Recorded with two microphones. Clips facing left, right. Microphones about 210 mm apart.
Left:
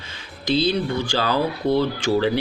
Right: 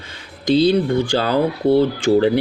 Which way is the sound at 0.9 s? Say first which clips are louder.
Right 5 dB; 50° right (ahead or behind).